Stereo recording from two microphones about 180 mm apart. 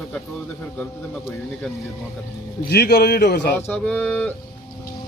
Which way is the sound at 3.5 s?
10° left (ahead or behind).